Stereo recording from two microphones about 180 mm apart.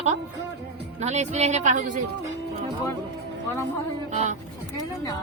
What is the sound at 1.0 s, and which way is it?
Speech, 40° right (ahead or behind).